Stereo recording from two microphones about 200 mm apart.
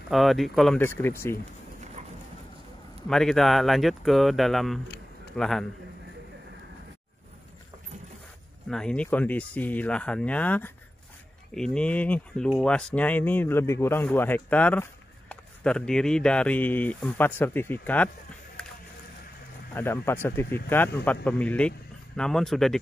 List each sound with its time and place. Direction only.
0.1 s speech: centre (ahead or behind)
2.0 s dog: 35° right (ahead or behind)
3.1 s speech: centre (ahead or behind)
8.6 s speech: 5° left (ahead or behind)
19.7 s speech: 10° left (ahead or behind)